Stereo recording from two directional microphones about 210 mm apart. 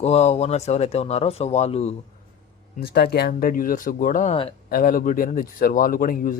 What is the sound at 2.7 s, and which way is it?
Speech, 45° left (ahead or behind).